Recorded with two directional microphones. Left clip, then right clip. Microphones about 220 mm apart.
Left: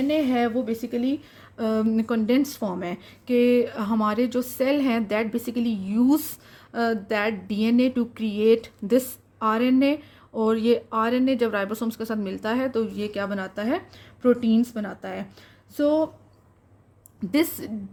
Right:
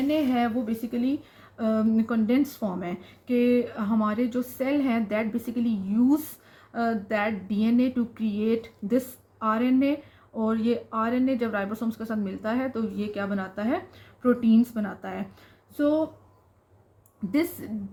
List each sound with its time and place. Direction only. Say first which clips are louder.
0.1 s speech: left 2 dB; 35° left (ahead or behind)
17.3 s speech: left 3 dB; 45° left (ahead or behind)